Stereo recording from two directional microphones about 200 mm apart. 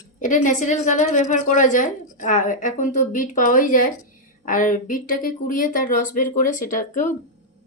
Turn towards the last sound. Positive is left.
turn(degrees=40)  # may be behind; listen again after turning